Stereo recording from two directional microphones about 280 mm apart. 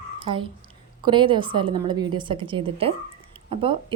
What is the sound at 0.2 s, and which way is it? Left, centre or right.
A child's voice, centre.